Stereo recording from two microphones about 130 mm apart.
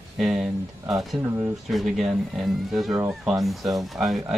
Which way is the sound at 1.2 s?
20° right (ahead or behind).